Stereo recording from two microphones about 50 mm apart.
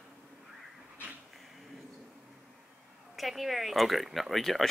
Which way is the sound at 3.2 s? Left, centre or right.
Centre.